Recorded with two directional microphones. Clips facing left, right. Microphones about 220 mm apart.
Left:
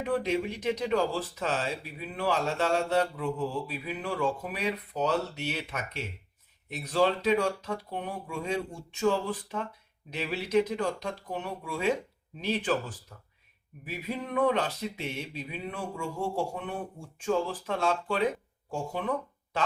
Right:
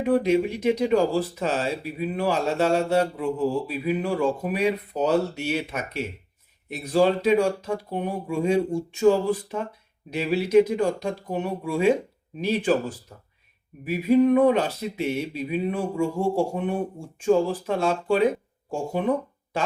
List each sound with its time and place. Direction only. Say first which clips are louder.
0.0 s speech: right 8 dB; 10° right (ahead or behind)
13.8 s speech: right 17 dB; 10° right (ahead or behind)